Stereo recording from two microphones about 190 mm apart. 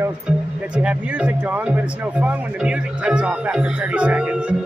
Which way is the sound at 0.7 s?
5° right (ahead or behind).